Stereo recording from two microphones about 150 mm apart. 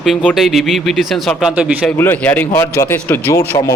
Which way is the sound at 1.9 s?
15° left (ahead or behind).